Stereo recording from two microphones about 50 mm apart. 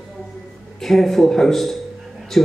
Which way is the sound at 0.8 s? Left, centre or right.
Centre.